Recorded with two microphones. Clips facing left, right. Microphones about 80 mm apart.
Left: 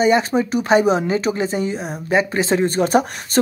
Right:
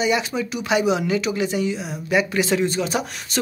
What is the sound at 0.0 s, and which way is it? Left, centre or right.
Speech, left.